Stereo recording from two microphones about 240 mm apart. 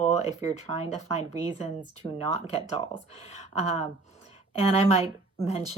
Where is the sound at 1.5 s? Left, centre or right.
Centre.